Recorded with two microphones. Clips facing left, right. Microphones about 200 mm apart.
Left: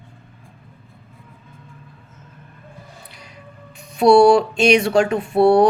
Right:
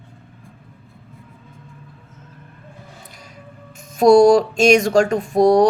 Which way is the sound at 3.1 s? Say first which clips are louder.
Right 1 dB; 45° right (ahead or behind).